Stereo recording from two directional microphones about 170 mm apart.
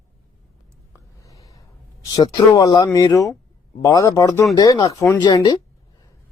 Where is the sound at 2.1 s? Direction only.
25° left (ahead or behind).